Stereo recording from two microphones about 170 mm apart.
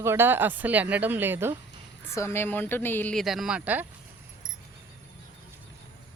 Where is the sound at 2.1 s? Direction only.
15° left (ahead or behind).